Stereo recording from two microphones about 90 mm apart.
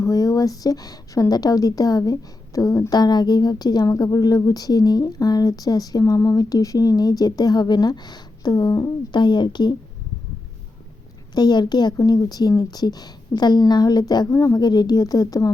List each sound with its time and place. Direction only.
0.0 s speech: 40° left (ahead or behind)
3.0 s a woman's voice: 50° left (ahead or behind)
9.1 s speech: 55° left (ahead or behind)
11.3 s a woman's voice: 50° left (ahead or behind)